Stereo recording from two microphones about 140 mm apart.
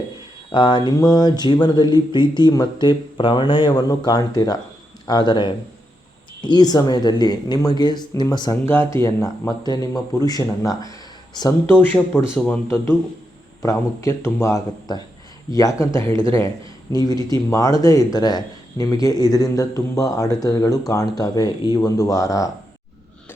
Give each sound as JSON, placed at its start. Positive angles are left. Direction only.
{"t": 0.5, "sound": "speech", "side_deg": 35}
{"t": 8.6, "sound": "speech", "side_deg": 15}